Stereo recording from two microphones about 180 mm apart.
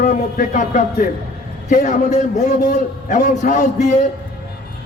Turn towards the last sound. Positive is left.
turn(degrees=45)  # may be behind; listen again after turning